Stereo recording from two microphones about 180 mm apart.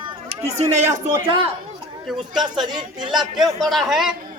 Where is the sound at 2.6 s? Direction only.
25° right (ahead or behind).